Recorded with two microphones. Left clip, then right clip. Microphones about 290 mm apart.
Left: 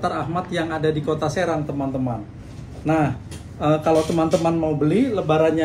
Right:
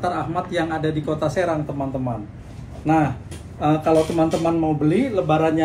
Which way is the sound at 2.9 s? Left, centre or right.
Centre.